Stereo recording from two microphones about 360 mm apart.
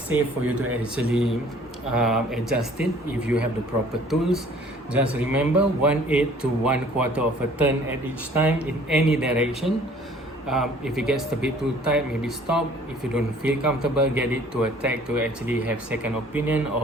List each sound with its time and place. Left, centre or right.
0.1 s a man's voice: centre
4.9 s a man's voice: centre
10.5 s a man's voice: centre